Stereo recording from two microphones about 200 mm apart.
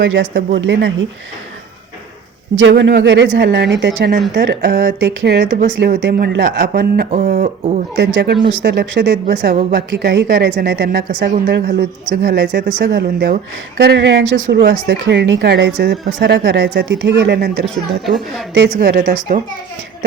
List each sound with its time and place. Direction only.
0.0 s speech: 65° right (ahead or behind)
2.6 s a woman's voice: 65° right (ahead or behind); by 7.8 s 35° right (ahead or behind)
7.9 s a woman's voice: 60° right (ahead or behind)
18.9 s a woman's voice: 45° right (ahead or behind)